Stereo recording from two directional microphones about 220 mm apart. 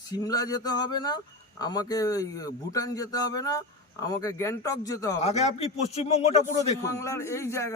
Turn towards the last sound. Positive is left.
turn(degrees=10)  # may be behind; listen again after turning